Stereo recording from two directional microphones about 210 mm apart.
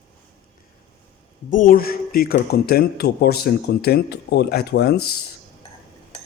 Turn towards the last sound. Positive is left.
turn(degrees=50)  # may be behind; listen again after turning